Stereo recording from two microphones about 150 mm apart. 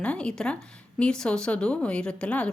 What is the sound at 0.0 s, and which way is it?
Speech, 5° left (ahead or behind).